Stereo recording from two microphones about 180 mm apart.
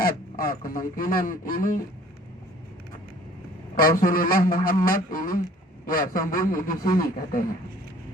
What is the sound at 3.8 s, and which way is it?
A man's voice, 50° left (ahead or behind).